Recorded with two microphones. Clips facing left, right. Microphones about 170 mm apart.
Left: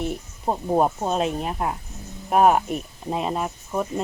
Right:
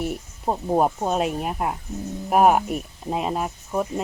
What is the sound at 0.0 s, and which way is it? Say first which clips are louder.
Speech: even; 5° right (ahead or behind).